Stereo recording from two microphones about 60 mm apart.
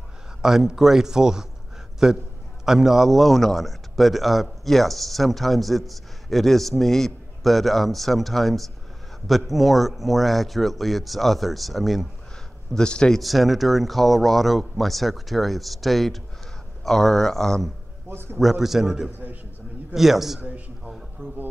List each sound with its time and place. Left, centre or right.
0.4 s a man's voice: centre
12.7 s speech: centre
13.2 s a man's voice: centre
18.1 s a man's voice: right
18.4 s a man's voice: centre
20.3 s a man's voice: right